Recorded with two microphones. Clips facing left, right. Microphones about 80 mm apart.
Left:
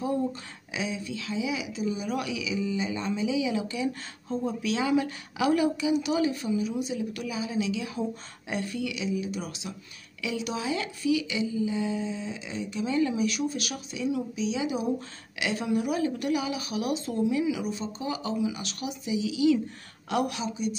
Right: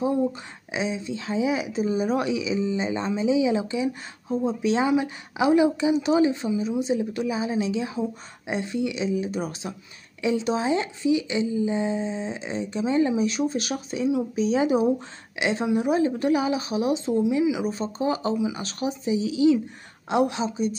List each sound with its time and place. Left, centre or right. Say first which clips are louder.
0.0 s speech: right 5 dB; right
15.3 s speech: right 4 dB; right
17.6 s speech: right 6 dB; right